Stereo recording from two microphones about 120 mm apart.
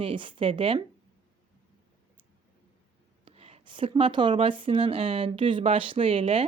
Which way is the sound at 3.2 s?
55° right (ahead or behind).